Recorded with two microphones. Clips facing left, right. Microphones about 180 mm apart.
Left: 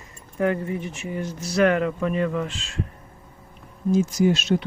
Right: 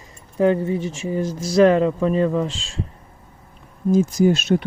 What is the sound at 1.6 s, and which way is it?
Speech, 30° right (ahead or behind).